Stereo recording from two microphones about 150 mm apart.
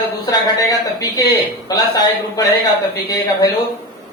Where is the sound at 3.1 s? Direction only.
25° left (ahead or behind).